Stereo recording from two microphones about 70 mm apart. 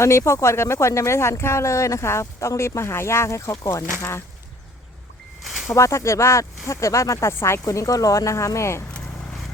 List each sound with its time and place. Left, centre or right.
0.0 s speech: left
5.4 s a sound: centre
5.7 s speech: left
7.6 s speech: left